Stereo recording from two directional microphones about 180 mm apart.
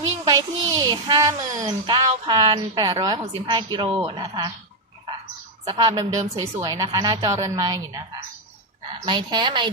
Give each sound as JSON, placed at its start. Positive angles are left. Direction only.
{"t": 0.3, "sound": "a child's voice", "side_deg": -25}
{"t": 5.6, "sound": "a child's voice", "side_deg": -20}
{"t": 9.0, "sound": "a child's voice", "side_deg": -25}